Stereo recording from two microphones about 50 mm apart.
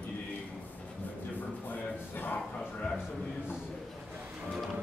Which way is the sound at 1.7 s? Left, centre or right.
Left.